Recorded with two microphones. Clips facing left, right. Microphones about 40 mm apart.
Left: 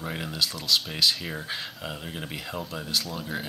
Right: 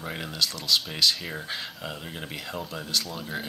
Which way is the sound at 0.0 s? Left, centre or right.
Centre.